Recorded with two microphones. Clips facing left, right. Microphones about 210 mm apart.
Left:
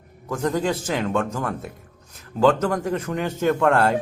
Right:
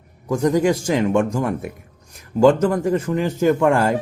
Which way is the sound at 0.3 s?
15° right (ahead or behind).